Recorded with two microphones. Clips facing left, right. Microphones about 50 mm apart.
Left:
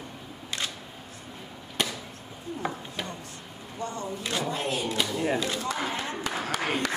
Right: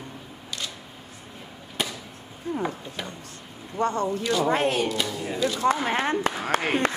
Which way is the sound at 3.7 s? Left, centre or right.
Right.